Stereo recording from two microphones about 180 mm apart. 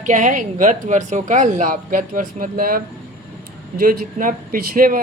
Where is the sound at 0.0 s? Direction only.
45° right (ahead or behind).